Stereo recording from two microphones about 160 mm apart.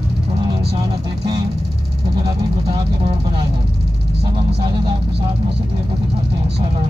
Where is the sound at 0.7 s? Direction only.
35° right (ahead or behind).